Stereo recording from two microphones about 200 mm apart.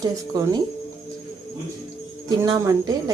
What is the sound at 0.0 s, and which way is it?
Speech, 15° right (ahead or behind).